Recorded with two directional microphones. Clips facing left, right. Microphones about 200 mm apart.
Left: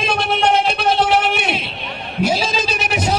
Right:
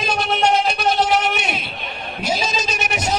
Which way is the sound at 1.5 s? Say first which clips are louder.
Left 3 dB; 30° left (ahead or behind).